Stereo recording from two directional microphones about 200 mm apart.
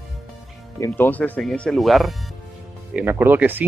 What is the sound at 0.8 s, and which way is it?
Speech, 10° left (ahead or behind).